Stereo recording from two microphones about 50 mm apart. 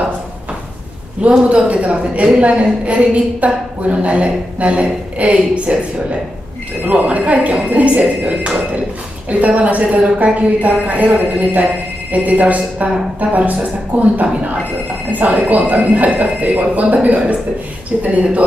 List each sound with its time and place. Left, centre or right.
1.3 s a woman's voice: right
6.9 s a woman's voice: right